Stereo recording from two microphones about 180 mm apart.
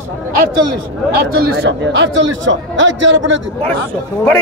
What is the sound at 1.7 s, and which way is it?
A man's voice, 85° right.